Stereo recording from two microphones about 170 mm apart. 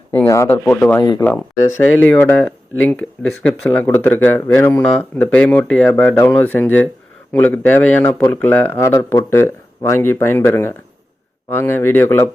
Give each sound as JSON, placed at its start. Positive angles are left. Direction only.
{"t": 0.1, "sound": "speech", "side_deg": 15}